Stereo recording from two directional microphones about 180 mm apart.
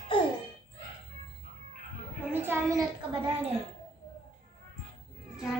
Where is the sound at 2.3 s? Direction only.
10° right (ahead or behind).